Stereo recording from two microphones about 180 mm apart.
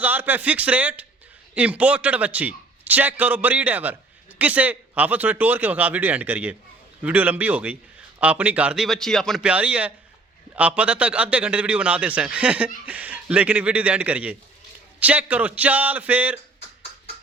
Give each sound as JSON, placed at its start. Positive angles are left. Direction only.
{"t": 0.0, "sound": "a man's voice", "side_deg": -10}